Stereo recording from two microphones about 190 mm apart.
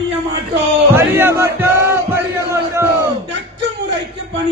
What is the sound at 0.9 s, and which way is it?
Music, 10° right (ahead or behind).